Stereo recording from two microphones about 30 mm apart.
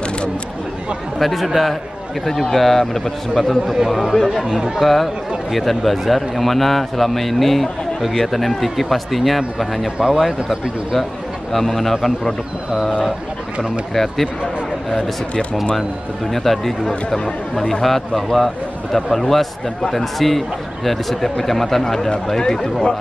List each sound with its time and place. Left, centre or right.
1.2 s a man's voice: centre
4.5 s speech: right
4.7 s a man's voice: centre
11.5 s a man's voice: centre
13.9 s a man's voice: centre
16.3 s a man's voice: centre